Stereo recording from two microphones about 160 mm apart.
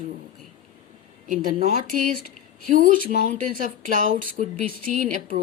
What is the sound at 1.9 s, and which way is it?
A woman's voice, 60° right (ahead or behind).